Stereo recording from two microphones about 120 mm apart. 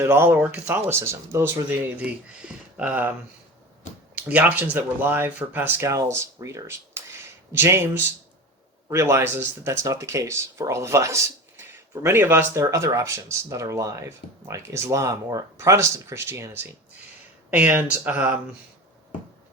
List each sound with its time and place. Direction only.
0.0 s speech: 20° right (ahead or behind)
2.0 s speech: 10° right (ahead or behind)